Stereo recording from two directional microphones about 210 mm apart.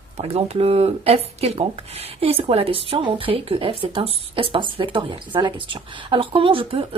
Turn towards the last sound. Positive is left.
turn(degrees=-25)  # may be behind; listen again after turning